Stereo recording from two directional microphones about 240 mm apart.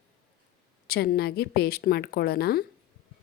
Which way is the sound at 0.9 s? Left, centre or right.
Left.